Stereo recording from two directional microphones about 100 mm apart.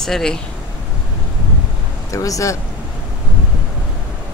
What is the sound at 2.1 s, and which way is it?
Speech, 35° left (ahead or behind).